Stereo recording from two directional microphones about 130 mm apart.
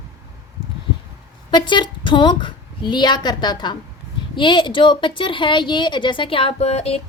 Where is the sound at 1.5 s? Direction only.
35° left (ahead or behind).